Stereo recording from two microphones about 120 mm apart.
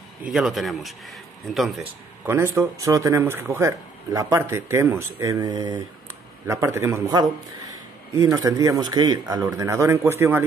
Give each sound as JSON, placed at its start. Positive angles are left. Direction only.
{"t": 0.2, "sound": "speech", "side_deg": -5}
{"t": 2.2, "sound": "speech", "side_deg": -20}